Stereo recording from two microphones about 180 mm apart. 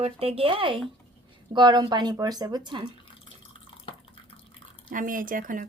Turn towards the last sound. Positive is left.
turn(degrees=-50)  # may be behind; listen again after turning